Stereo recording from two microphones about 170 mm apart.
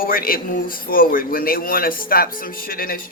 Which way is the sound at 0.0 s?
60° left (ahead or behind).